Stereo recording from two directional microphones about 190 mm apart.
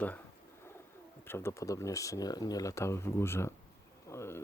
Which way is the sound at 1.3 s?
15° left (ahead or behind).